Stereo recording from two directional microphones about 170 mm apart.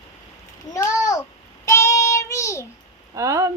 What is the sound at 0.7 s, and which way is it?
Babbling, 20° left (ahead or behind).